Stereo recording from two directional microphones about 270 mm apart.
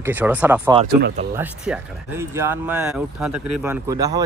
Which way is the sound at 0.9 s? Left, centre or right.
Right.